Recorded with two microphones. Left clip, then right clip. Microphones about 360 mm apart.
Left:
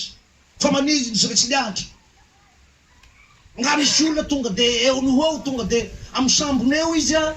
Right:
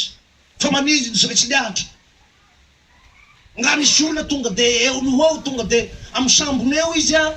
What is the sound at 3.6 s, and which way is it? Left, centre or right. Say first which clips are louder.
A man's voice: right 2 dB; centre.